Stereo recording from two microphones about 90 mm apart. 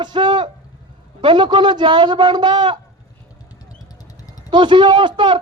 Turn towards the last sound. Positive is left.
turn(degrees=-60)  # may be behind; listen again after turning